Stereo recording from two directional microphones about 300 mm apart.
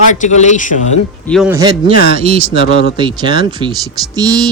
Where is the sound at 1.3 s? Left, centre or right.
Centre.